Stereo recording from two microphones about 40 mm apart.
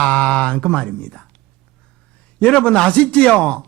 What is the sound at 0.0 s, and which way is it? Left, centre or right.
Speech, left.